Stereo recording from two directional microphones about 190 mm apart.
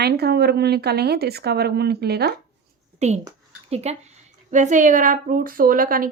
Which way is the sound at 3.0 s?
35° right (ahead or behind).